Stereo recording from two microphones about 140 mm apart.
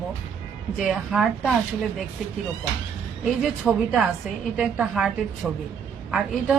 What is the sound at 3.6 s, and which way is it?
A woman's voice, 5° right (ahead or behind).